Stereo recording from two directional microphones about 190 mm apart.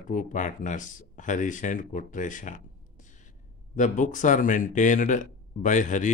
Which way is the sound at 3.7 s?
40° left (ahead or behind).